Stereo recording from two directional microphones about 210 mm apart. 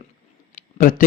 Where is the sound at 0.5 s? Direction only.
40° left (ahead or behind).